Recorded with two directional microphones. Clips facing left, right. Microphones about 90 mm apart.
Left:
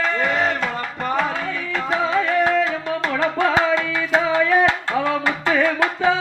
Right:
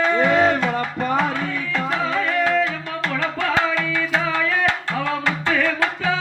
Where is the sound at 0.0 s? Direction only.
Centre (ahead or behind).